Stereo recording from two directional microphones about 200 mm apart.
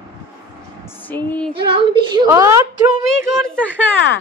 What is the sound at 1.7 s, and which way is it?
Speech, 20° right (ahead or behind).